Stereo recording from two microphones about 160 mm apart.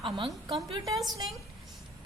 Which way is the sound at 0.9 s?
Centre (ahead or behind).